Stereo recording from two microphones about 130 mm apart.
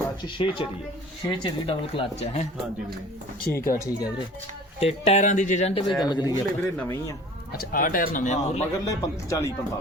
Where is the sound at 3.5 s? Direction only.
20° left (ahead or behind).